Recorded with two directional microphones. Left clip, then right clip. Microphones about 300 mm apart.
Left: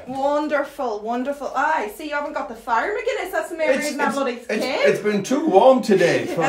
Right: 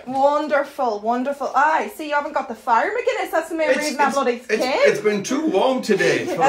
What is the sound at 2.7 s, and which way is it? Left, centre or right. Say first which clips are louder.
Speech: right 3 dB; centre.